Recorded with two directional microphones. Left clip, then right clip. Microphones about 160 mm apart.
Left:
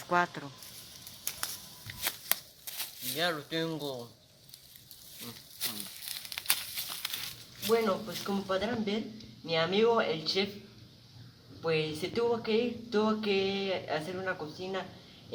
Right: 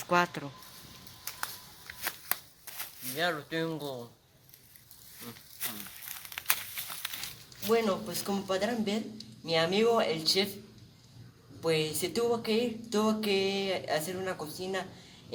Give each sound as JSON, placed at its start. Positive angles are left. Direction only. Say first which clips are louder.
{"t": 0.1, "sound": "speech", "louder": "right 1 dB", "side_deg": -55}
{"t": 1.2, "sound": "a sound", "louder": "even", "side_deg": 0}
{"t": 2.7, "sound": "speech", "louder": "left 1 dB", "side_deg": 0}
{"t": 5.2, "sound": "tearing", "louder": "left 3 dB", "side_deg": 0}
{"t": 6.7, "sound": "a sound", "louder": "left 2 dB", "side_deg": 0}
{"t": 7.7, "sound": "speech", "louder": "even", "side_deg": -25}
{"t": 11.6, "sound": "speech", "louder": "right 1 dB", "side_deg": -20}